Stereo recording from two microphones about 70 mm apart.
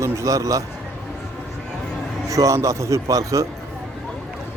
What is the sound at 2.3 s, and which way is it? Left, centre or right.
Speech, right.